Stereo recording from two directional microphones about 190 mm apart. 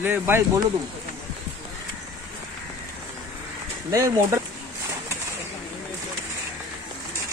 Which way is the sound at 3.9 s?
15° right (ahead or behind).